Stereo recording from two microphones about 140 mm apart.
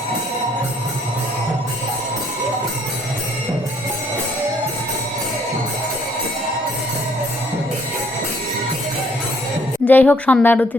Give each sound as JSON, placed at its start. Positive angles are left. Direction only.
{"t": 9.8, "sound": "a woman's voice", "side_deg": 10}